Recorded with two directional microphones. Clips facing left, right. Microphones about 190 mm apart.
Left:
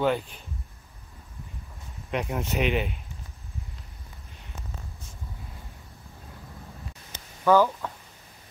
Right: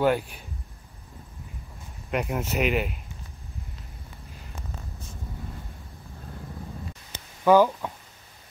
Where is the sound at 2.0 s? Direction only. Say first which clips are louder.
Right 1 dB; 5° right (ahead or behind).